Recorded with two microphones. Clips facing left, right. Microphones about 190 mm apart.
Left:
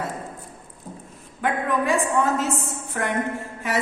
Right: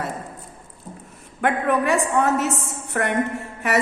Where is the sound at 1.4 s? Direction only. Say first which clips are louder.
Right 3 dB; 65° right (ahead or behind).